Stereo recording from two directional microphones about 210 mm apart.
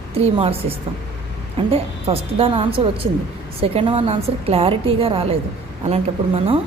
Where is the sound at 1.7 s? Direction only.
25° right (ahead or behind).